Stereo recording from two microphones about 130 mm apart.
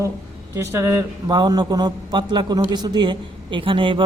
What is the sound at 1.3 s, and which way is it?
Speech, 30° right (ahead or behind).